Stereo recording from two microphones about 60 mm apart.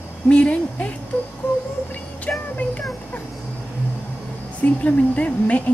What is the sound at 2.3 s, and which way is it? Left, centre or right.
Speech, left.